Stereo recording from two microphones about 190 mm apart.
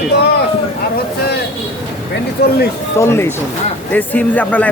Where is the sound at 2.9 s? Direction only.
15° left (ahead or behind).